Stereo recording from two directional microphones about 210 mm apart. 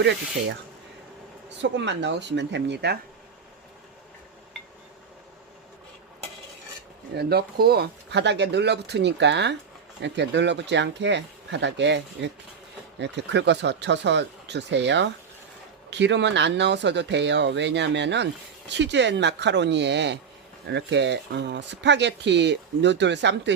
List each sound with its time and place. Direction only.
0.0 s speech: 55° right (ahead or behind)
7.1 s speech: 50° right (ahead or behind)